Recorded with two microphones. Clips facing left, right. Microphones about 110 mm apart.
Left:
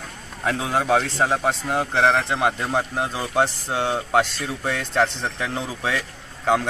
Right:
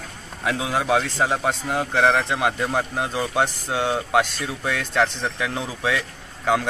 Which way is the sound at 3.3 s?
10° right (ahead or behind).